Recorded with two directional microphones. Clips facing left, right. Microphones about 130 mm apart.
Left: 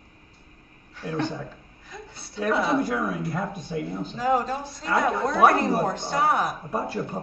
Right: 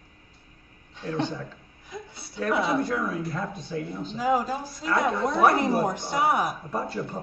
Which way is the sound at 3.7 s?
25° left (ahead or behind).